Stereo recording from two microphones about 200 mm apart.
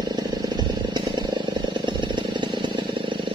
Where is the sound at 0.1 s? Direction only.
20° right (ahead or behind).